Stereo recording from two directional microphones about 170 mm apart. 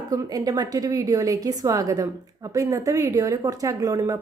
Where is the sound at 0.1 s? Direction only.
20° right (ahead or behind).